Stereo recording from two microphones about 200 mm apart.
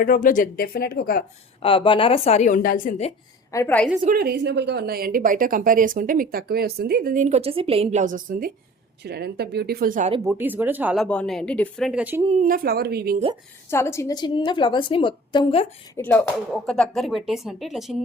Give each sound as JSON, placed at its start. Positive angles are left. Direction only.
{"t": 0.0, "sound": "speech", "side_deg": 45}
{"t": 1.6, "sound": "a woman's voice", "side_deg": 25}
{"t": 3.5, "sound": "a woman's voice", "side_deg": 10}
{"t": 4.0, "sound": "a woman's voice", "side_deg": -50}
{"t": 10.2, "sound": "speech", "side_deg": -10}
{"t": 11.0, "sound": "speech", "side_deg": 5}
{"t": 12.4, "sound": "a woman's voice", "side_deg": -45}
{"t": 13.7, "sound": "a woman's voice", "side_deg": 10}
{"t": 16.0, "sound": "a woman's voice", "side_deg": 10}